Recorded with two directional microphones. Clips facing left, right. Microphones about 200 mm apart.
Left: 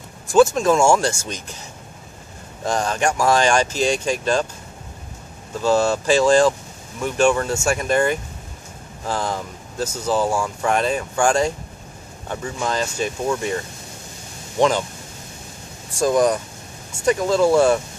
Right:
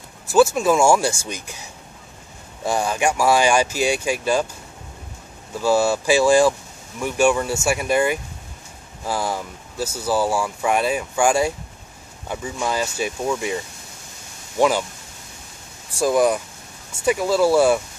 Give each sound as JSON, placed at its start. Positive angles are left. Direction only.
{"t": 0.3, "sound": "speech", "side_deg": -5}
{"t": 5.6, "sound": "speech", "side_deg": -10}
{"t": 14.6, "sound": "speech", "side_deg": -10}
{"t": 16.0, "sound": "speech", "side_deg": -5}